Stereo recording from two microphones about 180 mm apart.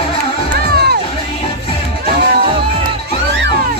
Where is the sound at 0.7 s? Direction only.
60° right (ahead or behind).